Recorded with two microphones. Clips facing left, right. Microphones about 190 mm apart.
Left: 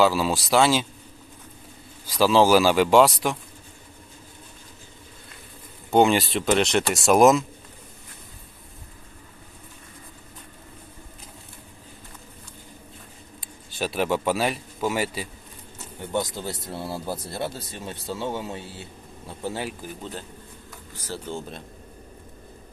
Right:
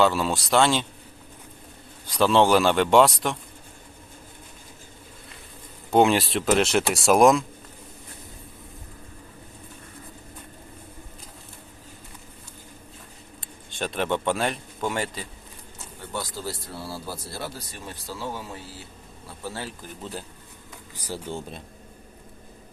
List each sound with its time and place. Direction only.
0.0 s speech: centre (ahead or behind)
2.0 s speech: centre (ahead or behind)
5.9 s speech: centre (ahead or behind)
13.4 s a man's voice: 5° left (ahead or behind)
16.1 s speech: 20° left (ahead or behind)
20.0 s speech: 5° right (ahead or behind)